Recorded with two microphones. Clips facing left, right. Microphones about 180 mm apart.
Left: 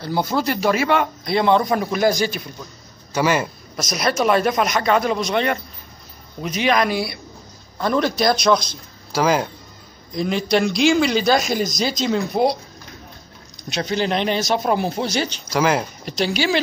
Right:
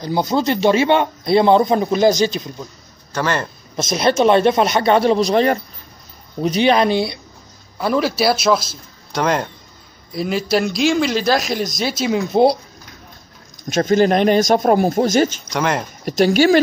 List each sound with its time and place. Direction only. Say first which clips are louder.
0.0 s a man's voice: right 3 dB; 20° right (ahead or behind)
3.1 s speech: left 2 dB; 10° left (ahead or behind)
3.7 s a man's voice: right 5 dB; 25° right (ahead or behind)
7.8 s a man's voice: right 2 dB; 5° right (ahead or behind)
12.3 s a man's voice: right 7 dB; 30° right (ahead or behind)
13.7 s speech: right 8 dB; 45° right (ahead or behind)
15.5 s a man's voice: left 1 dB; centre (ahead or behind)
16.1 s speech: right 8 dB; 45° right (ahead or behind)